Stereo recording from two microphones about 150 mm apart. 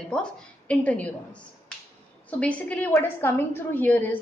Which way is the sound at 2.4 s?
10° left (ahead or behind).